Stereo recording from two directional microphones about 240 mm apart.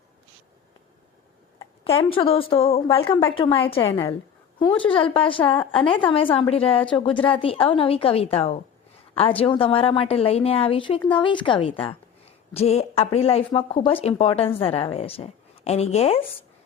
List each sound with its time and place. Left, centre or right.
1.5 s a woman's voice: left